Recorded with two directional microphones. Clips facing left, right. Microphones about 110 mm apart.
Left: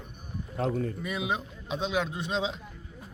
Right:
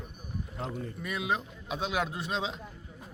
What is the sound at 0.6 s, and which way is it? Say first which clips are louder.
Speech: left 9 dB; 60° left (ahead or behind).